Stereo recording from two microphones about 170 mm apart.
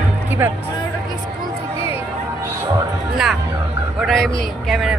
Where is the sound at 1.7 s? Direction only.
35° left (ahead or behind).